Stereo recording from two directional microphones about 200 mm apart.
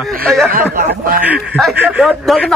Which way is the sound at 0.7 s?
45° right (ahead or behind).